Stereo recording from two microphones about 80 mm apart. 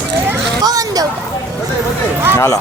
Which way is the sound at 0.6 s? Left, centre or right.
Right.